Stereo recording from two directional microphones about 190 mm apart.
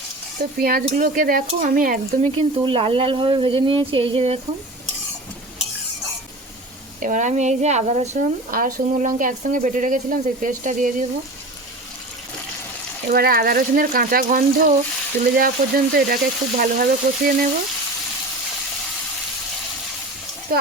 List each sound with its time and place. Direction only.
0.3 s speech: 50° right (ahead or behind)
2.3 s speech: 30° right (ahead or behind)
7.0 s speech: 40° right (ahead or behind)
13.1 s speech: 50° right (ahead or behind)
20.5 s a sound: 50° right (ahead or behind)